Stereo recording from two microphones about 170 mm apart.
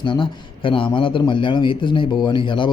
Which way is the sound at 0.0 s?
30° left (ahead or behind).